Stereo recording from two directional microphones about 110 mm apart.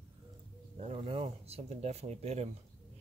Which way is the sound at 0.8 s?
75° right (ahead or behind).